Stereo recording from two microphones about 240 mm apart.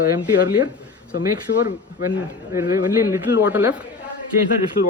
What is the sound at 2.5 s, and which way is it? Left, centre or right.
Speech, centre.